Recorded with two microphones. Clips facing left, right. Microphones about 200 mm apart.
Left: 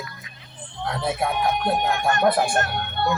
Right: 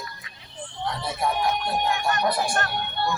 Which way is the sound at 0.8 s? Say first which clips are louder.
Left 3 dB; 55° left (ahead or behind).